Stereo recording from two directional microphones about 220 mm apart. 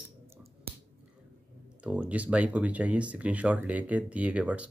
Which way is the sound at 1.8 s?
5° right (ahead or behind).